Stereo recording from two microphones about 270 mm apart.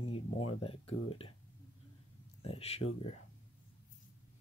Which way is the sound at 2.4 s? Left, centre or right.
Left.